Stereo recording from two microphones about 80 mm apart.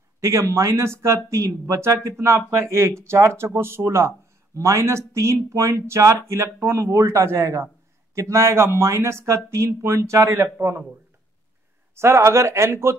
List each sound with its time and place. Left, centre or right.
0.2 s speech: right
11.9 s speech: right